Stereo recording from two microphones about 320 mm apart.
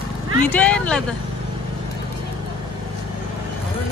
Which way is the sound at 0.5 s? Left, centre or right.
Centre.